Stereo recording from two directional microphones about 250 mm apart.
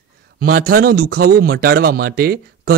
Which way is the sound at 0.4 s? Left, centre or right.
Right.